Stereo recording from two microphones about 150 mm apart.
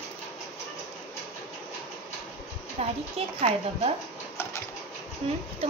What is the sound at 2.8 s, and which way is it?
Speech, 40° right (ahead or behind).